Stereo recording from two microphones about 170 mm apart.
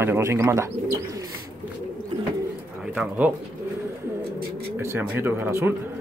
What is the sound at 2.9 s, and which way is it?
Speech, 10° right (ahead or behind).